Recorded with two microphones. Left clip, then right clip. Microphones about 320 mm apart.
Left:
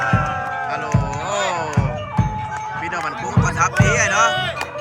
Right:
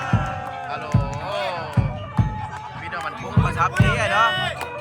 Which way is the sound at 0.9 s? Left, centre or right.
Left.